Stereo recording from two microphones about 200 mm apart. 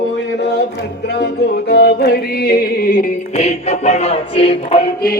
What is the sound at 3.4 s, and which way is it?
Music, 35° left (ahead or behind).